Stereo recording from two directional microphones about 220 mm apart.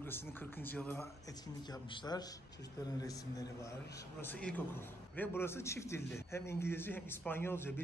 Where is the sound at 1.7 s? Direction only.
20° left (ahead or behind).